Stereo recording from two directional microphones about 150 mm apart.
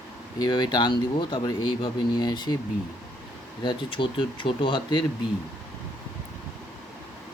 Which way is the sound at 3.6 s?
30° left (ahead or behind).